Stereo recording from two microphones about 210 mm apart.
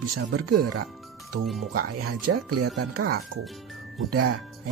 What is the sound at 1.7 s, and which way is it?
Speech, 50° right (ahead or behind).